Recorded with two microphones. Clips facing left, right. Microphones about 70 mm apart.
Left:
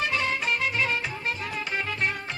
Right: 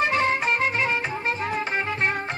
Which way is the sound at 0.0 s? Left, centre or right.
Right.